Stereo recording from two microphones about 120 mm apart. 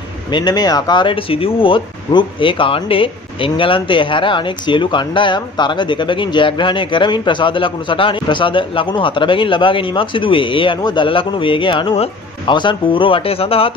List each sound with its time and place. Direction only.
0.3 s speech: 40° left (ahead or behind)